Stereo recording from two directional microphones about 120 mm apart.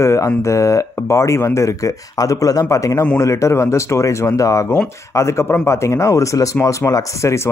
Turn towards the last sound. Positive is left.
turn(degrees=25)  # may be behind; listen again after turning